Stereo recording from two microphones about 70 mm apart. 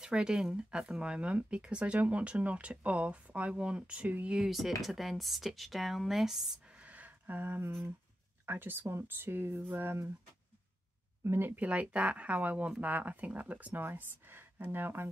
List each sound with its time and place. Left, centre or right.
0.0 s speech: centre
4.4 s speech: centre
6.6 s a sound: centre
8.5 s speech: right
11.2 s speech: right